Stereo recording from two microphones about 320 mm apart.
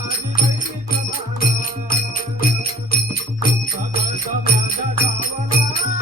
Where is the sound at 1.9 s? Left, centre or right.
Left.